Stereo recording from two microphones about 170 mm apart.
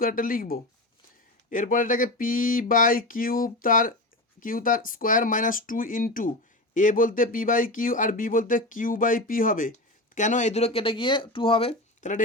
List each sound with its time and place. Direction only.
0.0 s speech: 55° left (ahead or behind); by 11.7 s 30° left (ahead or behind)
11.9 s speech: 45° left (ahead or behind)